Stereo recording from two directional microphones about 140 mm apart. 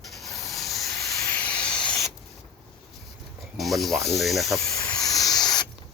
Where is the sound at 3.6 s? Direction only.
Centre (ahead or behind).